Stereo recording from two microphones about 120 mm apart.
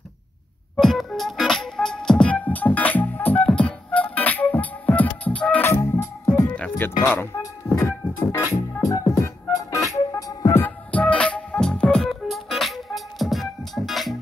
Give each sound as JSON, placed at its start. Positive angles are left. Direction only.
{"t": 0.7, "sound": "music", "side_deg": 0}
{"t": 6.5, "sound": "music", "side_deg": 10}
{"t": 7.0, "sound": "music", "side_deg": 20}
{"t": 10.9, "sound": "music", "side_deg": 10}